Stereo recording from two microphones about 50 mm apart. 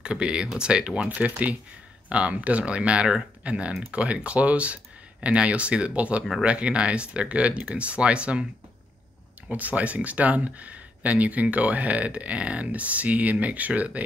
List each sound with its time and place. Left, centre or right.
0.0 s speech: centre
9.5 s speech: right